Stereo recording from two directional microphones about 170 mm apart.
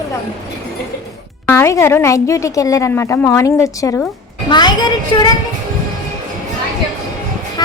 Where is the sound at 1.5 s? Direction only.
15° left (ahead or behind).